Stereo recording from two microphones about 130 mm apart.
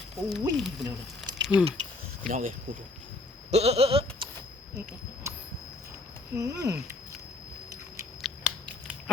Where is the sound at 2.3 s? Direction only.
90° right.